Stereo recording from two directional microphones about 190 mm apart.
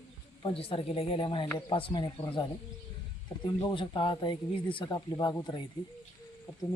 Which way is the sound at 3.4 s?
25° left (ahead or behind).